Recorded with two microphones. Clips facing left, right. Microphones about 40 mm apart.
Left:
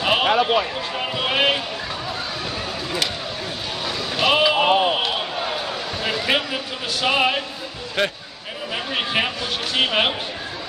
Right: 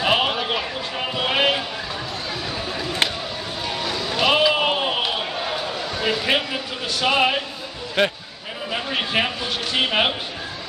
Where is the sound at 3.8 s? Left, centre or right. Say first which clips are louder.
Even; centre.